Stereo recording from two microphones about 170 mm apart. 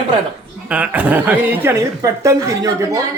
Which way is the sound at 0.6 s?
10° right (ahead or behind).